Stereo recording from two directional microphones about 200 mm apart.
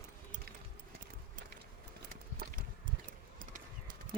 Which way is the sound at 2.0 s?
45° right (ahead or behind).